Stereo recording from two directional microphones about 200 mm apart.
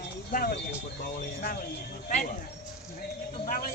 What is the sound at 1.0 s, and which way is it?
A man's voice, 50° left (ahead or behind).